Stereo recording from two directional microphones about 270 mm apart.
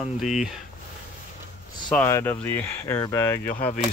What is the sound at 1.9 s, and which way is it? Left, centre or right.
Speech, centre.